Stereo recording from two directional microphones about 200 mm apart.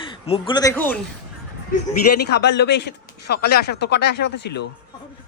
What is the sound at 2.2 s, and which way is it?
Speech, 55° left (ahead or behind).